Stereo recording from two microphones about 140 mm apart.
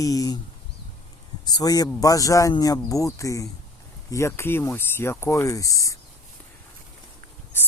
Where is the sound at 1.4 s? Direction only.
25° left (ahead or behind).